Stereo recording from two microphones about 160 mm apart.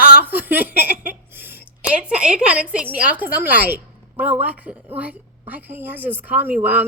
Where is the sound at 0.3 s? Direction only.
10° right (ahead or behind).